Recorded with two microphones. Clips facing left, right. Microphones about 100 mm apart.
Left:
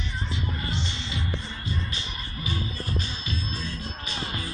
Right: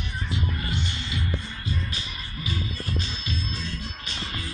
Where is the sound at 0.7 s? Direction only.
30° left (ahead or behind).